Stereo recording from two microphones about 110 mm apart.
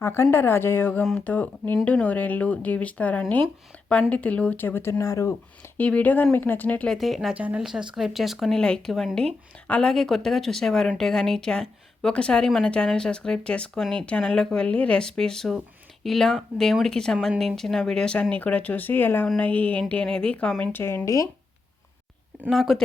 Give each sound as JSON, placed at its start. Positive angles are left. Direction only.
{"t": 0.0, "sound": "speech", "side_deg": 25}
{"t": 5.7, "sound": "speech", "side_deg": 15}
{"t": 6.9, "sound": "speech", "side_deg": 0}
{"t": 7.3, "sound": "speech", "side_deg": -10}
{"t": 20.8, "sound": "speech", "side_deg": 25}
{"t": 22.4, "sound": "speech", "side_deg": 0}